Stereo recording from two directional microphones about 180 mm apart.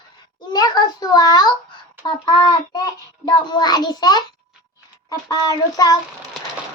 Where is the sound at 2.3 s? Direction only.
25° left (ahead or behind).